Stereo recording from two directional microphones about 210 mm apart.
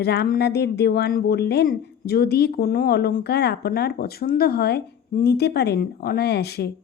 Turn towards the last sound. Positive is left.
turn(degrees=50)  # may be behind; listen again after turning